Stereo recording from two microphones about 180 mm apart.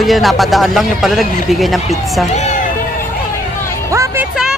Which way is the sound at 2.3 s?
40° left (ahead or behind).